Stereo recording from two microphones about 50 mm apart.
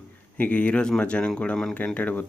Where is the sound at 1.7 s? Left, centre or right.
Left.